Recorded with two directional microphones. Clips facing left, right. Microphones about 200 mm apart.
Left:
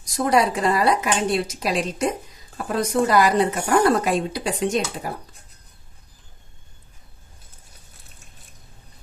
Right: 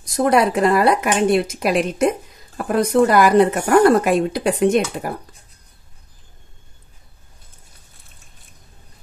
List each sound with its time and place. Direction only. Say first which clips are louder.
0.0 s a woman's voice: right 4 dB; 55° right (ahead or behind)